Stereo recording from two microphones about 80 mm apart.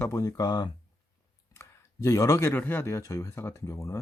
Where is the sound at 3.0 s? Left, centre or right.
Left.